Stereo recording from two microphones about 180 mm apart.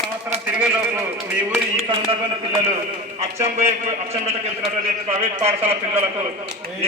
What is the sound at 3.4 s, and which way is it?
A man's voice, 35° right (ahead or behind).